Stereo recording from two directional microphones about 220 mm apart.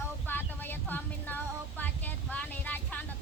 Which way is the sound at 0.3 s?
10° left (ahead or behind).